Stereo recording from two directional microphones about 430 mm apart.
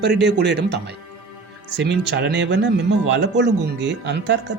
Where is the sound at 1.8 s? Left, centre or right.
Right.